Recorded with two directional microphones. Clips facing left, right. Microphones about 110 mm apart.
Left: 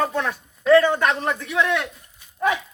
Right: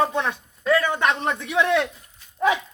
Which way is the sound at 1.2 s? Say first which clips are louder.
Even; 30° right (ahead or behind).